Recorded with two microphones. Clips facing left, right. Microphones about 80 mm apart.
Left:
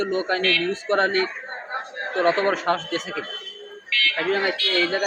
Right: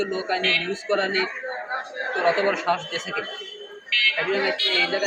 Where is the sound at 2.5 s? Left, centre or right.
Left.